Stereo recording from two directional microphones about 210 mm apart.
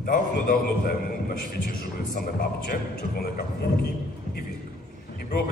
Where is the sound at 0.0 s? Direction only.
40° left (ahead or behind).